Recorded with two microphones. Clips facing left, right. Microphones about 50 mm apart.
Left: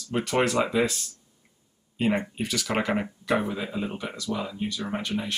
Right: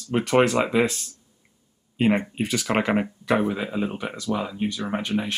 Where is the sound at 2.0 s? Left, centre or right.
Right.